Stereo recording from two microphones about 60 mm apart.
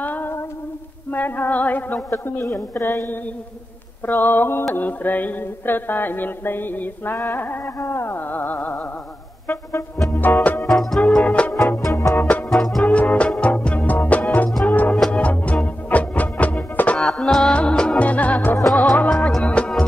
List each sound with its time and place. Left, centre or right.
0.0 s humming: left
1.1 s mantra: left
2.0 s mantra: left
8.3 s mantra: left
9.5 s music: left
10.7 s music: centre
11.2 s music: left
11.8 s music: left
12.2 s music: left
12.4 s music: centre
12.8 s music: left
17.0 s music: centre; by 18.6 s left
18.8 s music: centre